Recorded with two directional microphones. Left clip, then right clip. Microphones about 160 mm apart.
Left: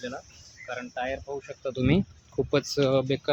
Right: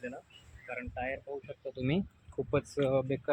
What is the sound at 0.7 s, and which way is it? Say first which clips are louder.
Speech: left 6 dB; 20° left (ahead or behind).